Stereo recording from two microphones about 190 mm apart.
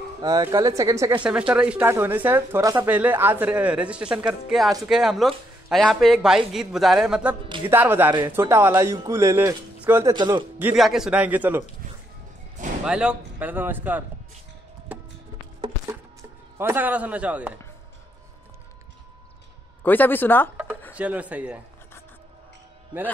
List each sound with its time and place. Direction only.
0.2 s speech: 20° right (ahead or behind)
1.2 s speech: 5° right (ahead or behind)
10.1 s speech: 25° right (ahead or behind)
10.6 s speech: 5° right (ahead or behind)
12.8 s speech: 5° right (ahead or behind)
15.9 s speech: 15° right (ahead or behind)
19.8 s speech: 10° left (ahead or behind)
20.9 s speech: 5° right (ahead or behind)